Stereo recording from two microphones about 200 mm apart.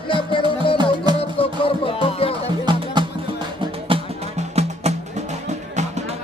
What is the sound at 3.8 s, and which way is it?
Music, 30° right (ahead or behind).